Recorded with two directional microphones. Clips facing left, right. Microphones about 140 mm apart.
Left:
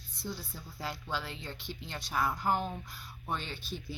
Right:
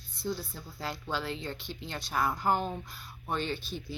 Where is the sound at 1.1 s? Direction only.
10° left (ahead or behind).